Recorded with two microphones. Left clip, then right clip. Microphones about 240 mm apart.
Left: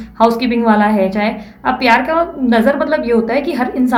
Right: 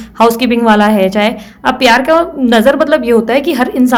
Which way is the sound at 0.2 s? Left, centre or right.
Right.